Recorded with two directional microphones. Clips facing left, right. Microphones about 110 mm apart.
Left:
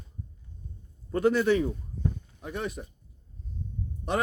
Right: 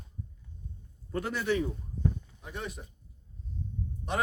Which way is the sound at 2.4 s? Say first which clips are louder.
Left 6 dB; 60° left (ahead or behind).